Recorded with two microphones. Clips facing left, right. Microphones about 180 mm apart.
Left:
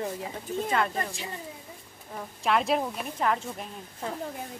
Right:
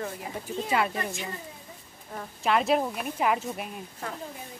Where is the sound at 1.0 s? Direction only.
35° left (ahead or behind).